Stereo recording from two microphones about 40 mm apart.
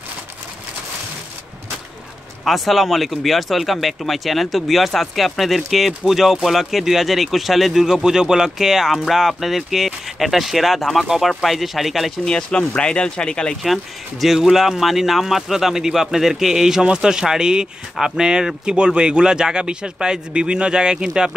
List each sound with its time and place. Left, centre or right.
2.4 s speech: centre
12.3 s speech: left
14.2 s speech: centre